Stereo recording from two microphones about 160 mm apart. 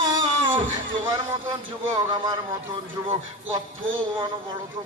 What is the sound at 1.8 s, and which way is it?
A man's voice, 25° right (ahead or behind).